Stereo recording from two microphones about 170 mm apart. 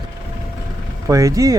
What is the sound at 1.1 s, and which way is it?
Speech, 20° right (ahead or behind).